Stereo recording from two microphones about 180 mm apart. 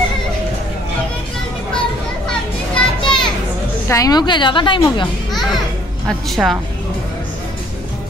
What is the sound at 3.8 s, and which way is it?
A woman's voice, 20° left (ahead or behind).